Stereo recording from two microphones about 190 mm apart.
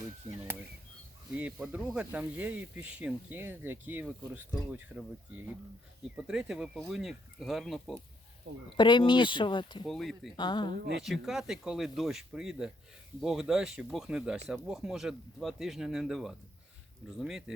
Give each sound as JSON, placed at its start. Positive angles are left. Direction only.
{"t": 0.3, "sound": "speech", "side_deg": -10}
{"t": 8.7, "sound": "speech", "side_deg": 25}
{"t": 9.8, "sound": "speech", "side_deg": 0}
{"t": 10.3, "sound": "speech", "side_deg": 25}
{"t": 10.7, "sound": "speech", "side_deg": -55}
{"t": 11.0, "sound": "speech", "side_deg": 0}